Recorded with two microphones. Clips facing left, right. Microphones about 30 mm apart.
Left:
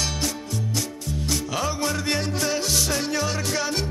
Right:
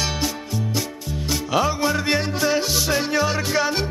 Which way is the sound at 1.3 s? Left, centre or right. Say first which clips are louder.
Right 6 dB; centre.